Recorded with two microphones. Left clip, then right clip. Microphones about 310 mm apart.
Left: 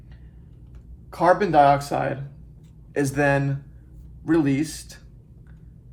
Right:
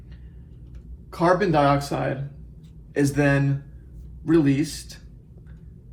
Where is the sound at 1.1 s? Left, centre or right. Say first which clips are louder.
Left 3 dB; left.